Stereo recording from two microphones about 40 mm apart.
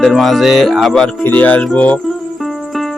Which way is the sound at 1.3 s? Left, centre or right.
Left.